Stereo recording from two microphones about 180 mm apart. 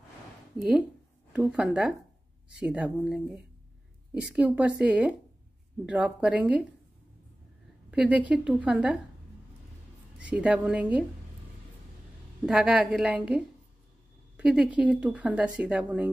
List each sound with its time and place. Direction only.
0.6 s speech: 5° right (ahead or behind)
7.9 s speech: 5° right (ahead or behind)
10.1 s speech: 5° right (ahead or behind)
12.4 s speech: 5° right (ahead or behind)